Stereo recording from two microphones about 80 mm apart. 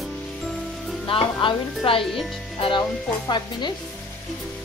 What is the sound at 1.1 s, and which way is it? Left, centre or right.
Frying, left.